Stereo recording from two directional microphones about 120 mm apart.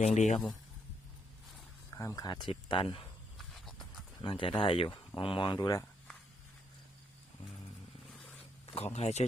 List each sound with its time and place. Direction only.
0.0 s speech: 75° left (ahead or behind)
1.9 s speech: 25° left (ahead or behind)
2.2 s speech: 40° left (ahead or behind)
3.3 s horse: centre (ahead or behind)
4.2 s speech: 45° left (ahead or behind)
8.7 s speech: 60° left (ahead or behind)